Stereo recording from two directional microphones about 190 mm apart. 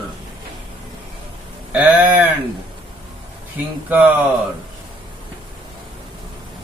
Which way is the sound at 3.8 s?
10° right (ahead or behind).